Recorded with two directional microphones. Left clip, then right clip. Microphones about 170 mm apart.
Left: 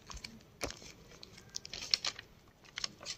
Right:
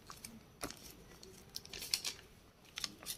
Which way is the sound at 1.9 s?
35° left (ahead or behind).